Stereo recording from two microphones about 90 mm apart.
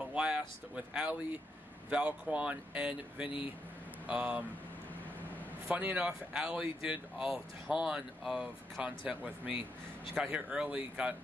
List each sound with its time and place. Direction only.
0.1 s speech: 10° right (ahead or behind)
5.7 s speech: 15° right (ahead or behind)
10.1 s speech: 5° right (ahead or behind)